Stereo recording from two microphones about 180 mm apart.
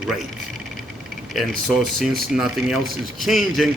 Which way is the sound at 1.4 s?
Centre (ahead or behind).